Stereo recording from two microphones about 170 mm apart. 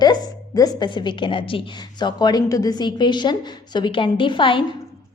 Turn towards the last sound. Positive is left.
turn(degrees=30)  # may be behind; listen again after turning